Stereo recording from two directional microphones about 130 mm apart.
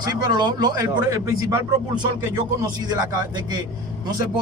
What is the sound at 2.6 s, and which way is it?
A man's voice, 30° right (ahead or behind).